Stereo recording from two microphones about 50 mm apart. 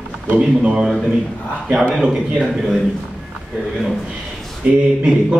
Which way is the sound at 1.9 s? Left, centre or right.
Centre.